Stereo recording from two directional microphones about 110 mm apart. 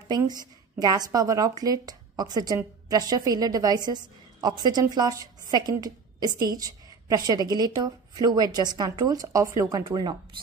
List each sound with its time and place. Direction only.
0.3 s speech: 40° right (ahead or behind)